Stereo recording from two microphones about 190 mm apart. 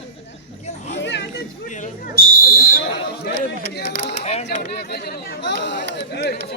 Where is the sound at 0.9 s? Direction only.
70° left (ahead or behind).